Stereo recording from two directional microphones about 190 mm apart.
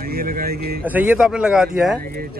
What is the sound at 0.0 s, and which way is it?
Speech, 50° right (ahead or behind).